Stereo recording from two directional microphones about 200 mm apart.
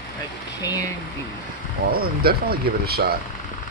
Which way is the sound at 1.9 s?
50° right (ahead or behind).